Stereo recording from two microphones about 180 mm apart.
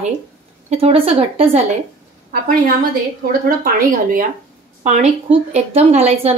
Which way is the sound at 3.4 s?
50° right (ahead or behind).